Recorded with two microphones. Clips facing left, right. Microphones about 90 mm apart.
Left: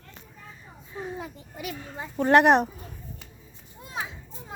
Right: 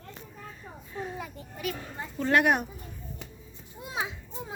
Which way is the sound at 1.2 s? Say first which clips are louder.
Right 1 dB; 20° left (ahead or behind).